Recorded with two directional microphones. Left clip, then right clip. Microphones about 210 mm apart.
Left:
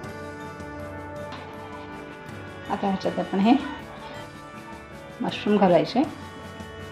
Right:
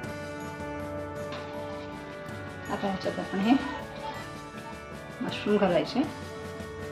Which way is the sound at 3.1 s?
30° left (ahead or behind).